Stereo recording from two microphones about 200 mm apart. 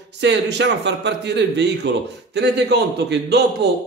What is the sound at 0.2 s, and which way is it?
A man's voice, 60° right (ahead or behind).